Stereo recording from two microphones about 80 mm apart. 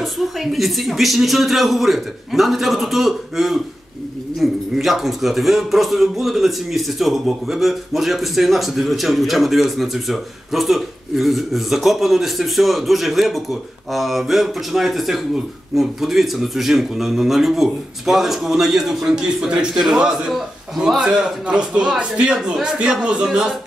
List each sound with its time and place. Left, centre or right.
0.0 s a man's voice: centre